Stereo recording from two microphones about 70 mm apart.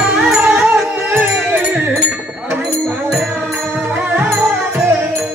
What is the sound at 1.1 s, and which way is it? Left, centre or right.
Music, right.